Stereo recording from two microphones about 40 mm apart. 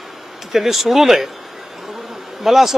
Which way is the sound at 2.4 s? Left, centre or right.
Centre.